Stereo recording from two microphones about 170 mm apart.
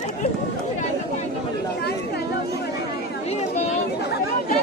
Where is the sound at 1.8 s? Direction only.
70° left (ahead or behind).